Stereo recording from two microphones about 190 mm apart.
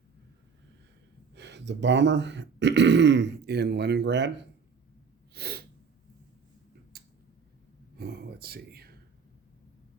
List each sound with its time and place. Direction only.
1.4 s speech: 65° right (ahead or behind)
5.3 s sneeze: 55° right (ahead or behind)
6.9 s tick-tock: 55° right (ahead or behind)
7.9 s a sound: 55° right (ahead or behind)